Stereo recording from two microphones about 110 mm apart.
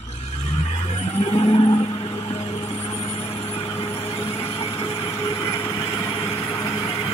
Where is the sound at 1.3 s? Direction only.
60° left (ahead or behind).